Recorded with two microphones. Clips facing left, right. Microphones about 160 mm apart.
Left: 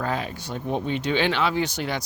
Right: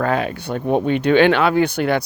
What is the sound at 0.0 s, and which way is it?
Speech, 65° right (ahead or behind).